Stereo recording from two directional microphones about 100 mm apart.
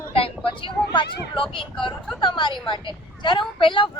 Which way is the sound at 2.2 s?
50° left (ahead or behind).